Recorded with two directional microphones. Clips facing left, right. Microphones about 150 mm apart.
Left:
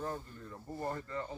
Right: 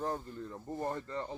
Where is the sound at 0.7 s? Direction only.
20° right (ahead or behind).